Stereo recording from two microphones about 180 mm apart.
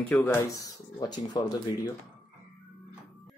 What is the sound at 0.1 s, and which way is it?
A woman's voice, 10° left (ahead or behind).